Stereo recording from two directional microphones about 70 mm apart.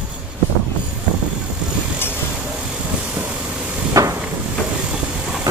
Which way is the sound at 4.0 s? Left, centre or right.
Right.